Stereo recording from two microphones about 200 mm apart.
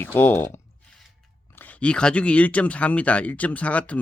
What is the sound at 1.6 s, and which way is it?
Speech, 5° left (ahead or behind).